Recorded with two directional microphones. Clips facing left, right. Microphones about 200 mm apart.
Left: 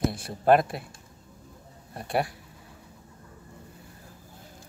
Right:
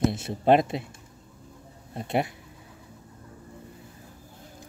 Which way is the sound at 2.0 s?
20° right (ahead or behind).